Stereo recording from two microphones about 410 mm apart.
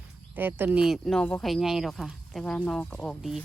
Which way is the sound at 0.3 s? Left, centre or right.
Centre.